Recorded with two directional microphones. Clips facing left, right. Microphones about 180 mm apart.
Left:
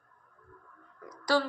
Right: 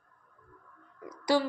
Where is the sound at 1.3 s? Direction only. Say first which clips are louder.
Right 1 dB; 20° right (ahead or behind).